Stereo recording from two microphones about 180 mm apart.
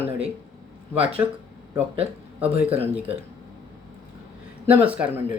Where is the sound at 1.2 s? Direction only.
10° right (ahead or behind).